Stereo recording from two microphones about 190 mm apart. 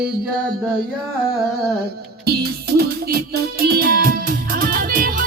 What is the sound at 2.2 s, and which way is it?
Music, 55° right (ahead or behind).